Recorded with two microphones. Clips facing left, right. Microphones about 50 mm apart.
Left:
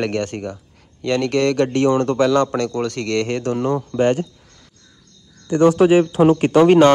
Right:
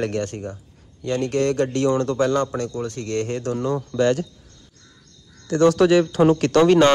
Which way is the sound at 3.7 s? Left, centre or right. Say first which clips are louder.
Left 1 dB; left.